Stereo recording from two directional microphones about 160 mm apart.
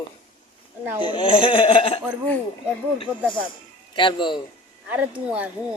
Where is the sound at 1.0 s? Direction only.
30° left (ahead or behind).